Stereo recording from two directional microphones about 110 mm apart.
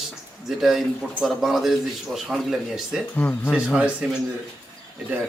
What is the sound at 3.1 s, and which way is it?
Speech, 15° left (ahead or behind).